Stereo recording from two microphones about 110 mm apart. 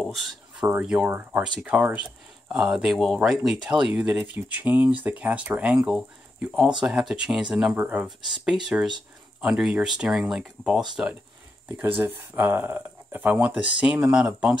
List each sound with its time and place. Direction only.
0.0 s speech: centre (ahead or behind)
1.0 s speech: 20° right (ahead or behind)
2.5 s speech: 5° right (ahead or behind)
12.0 s speech: 15° right (ahead or behind)